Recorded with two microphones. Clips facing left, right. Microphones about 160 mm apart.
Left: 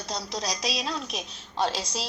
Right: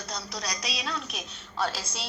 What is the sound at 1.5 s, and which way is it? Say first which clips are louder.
Speech: left 3 dB; 30° left (ahead or behind).